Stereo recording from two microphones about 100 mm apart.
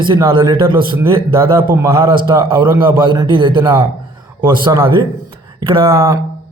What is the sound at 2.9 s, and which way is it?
Speech, 55° right (ahead or behind).